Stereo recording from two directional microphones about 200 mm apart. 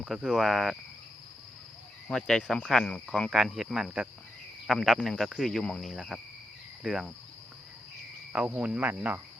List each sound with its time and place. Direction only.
0.0 s speech: centre (ahead or behind)
2.0 s speech: centre (ahead or behind)
8.3 s cricket: 5° right (ahead or behind)